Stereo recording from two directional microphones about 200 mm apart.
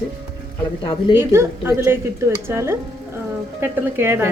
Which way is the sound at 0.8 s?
25° left (ahead or behind).